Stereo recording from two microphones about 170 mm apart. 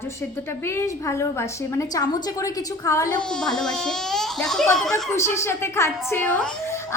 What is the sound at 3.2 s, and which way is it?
Speech, 5° left (ahead or behind).